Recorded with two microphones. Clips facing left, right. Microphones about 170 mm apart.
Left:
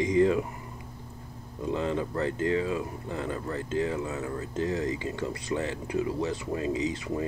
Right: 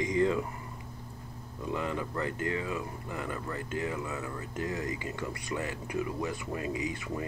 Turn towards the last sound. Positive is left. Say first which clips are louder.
# left 5 dB
turn(degrees=25)  # may be behind; listen again after turning